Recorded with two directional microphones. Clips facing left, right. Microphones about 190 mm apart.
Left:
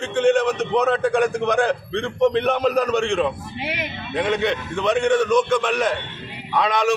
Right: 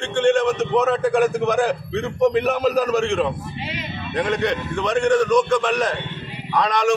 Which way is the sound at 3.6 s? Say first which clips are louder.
Left 3 dB; 70° left (ahead or behind).